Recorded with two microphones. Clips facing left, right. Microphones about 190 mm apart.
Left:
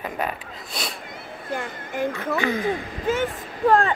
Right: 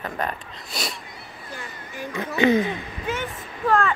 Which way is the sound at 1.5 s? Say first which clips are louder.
Left 9 dB; 55° left (ahead or behind).